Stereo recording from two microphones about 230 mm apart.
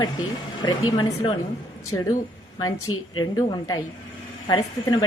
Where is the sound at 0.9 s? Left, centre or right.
Centre.